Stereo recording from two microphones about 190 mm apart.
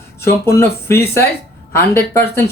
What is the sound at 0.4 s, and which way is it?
Speech, 15° left (ahead or behind).